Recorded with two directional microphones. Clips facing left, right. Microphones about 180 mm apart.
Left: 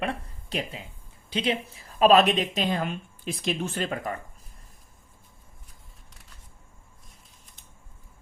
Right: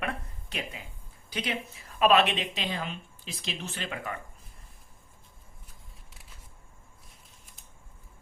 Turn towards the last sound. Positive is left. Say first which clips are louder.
# even
turn(degrees=0)  # may be behind; listen again after turning